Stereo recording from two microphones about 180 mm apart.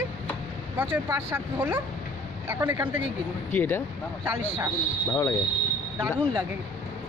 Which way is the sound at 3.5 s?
10° left (ahead or behind).